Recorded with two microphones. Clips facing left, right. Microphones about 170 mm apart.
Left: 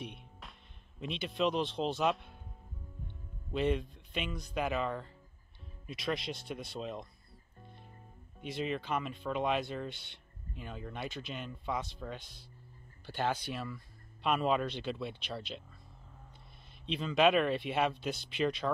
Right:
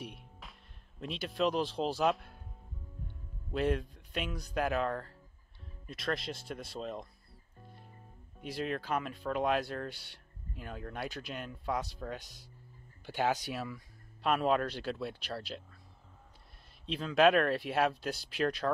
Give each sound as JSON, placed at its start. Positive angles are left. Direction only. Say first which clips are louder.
{"t": 0.0, "sound": "speech", "louder": "left 1 dB", "side_deg": 0}
{"t": 3.5, "sound": "speech", "louder": "even", "side_deg": 0}
{"t": 7.6, "sound": "music", "louder": "even", "side_deg": -5}
{"t": 8.4, "sound": "speech", "louder": "even", "side_deg": -5}
{"t": 16.8, "sound": "speech", "louder": "right 2 dB", "side_deg": -5}